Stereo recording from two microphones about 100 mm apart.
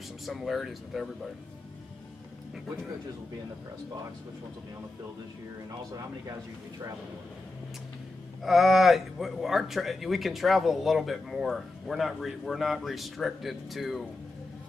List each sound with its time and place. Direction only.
0.3 s speech: centre (ahead or behind)
5.7 s speech: 40° right (ahead or behind)
8.4 s speech: centre (ahead or behind)